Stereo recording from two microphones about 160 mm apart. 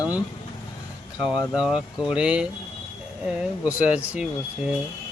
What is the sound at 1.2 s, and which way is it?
Speech, 5° right (ahead or behind).